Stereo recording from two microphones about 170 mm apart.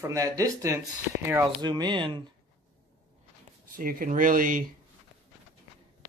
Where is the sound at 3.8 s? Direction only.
55° right (ahead or behind).